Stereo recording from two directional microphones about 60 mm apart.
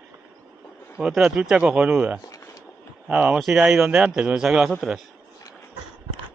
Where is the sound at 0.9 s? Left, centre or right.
Centre.